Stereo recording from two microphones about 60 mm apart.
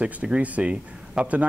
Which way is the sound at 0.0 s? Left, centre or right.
Right.